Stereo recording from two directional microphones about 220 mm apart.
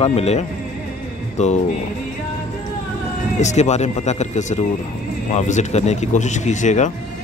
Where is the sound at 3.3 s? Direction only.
30° left (ahead or behind).